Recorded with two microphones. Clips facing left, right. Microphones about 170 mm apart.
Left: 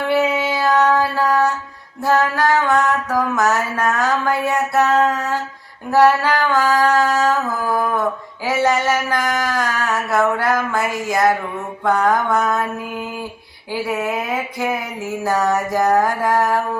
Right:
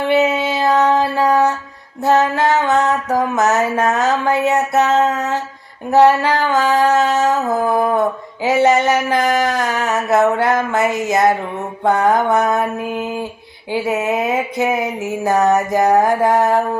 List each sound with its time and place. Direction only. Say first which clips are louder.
0.1 s music: right 2 dB; 20° right (ahead or behind)